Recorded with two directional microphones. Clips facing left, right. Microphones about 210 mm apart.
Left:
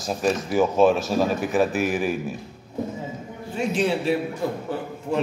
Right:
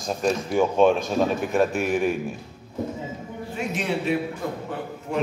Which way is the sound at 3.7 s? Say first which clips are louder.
Left 4 dB; 30° left (ahead or behind).